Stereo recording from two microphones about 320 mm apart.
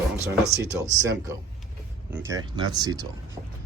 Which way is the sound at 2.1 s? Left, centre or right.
Centre.